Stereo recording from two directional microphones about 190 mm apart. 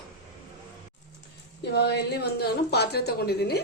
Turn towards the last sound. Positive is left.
turn(degrees=60)  # may be behind; listen again after turning